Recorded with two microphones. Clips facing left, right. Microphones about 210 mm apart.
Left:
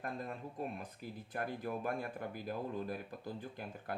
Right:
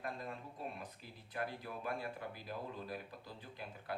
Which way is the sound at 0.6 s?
50° left (ahead or behind).